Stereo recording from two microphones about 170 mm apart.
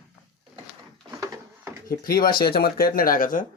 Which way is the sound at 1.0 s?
20° right (ahead or behind).